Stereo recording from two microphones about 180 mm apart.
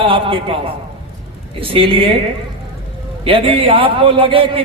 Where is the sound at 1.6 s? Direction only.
30° right (ahead or behind).